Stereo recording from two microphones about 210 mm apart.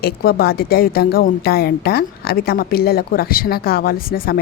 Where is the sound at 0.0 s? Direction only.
45° left (ahead or behind).